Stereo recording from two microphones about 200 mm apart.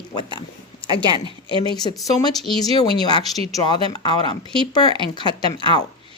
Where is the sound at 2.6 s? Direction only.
20° left (ahead or behind).